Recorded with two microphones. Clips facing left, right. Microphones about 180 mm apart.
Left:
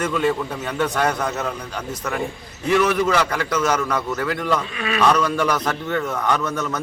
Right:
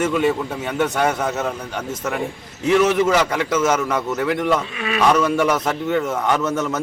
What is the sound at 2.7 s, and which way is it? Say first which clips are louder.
A man's voice: right 2 dB; 25° right (ahead or behind).